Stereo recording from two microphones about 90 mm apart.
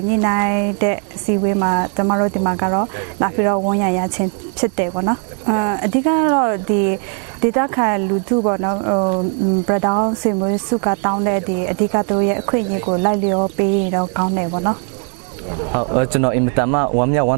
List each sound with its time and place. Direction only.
0.1 s speech: 20° right (ahead or behind)